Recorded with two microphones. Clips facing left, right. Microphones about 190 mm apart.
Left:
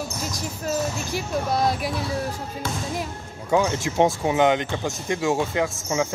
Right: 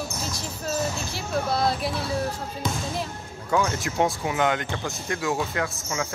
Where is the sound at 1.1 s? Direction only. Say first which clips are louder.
Left 3 dB; 15° left (ahead or behind).